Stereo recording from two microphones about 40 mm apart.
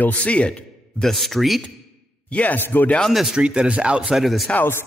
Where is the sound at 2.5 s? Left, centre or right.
Left.